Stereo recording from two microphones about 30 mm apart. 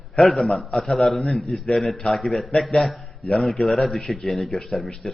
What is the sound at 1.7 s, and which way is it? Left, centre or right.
A man's voice, centre.